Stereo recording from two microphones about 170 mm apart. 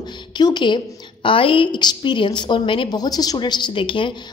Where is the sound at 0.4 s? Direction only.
25° left (ahead or behind).